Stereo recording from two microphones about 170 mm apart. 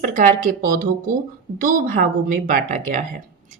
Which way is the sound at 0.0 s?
50° right (ahead or behind).